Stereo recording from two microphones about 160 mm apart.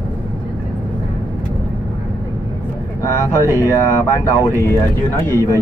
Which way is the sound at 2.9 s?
20° left (ahead or behind).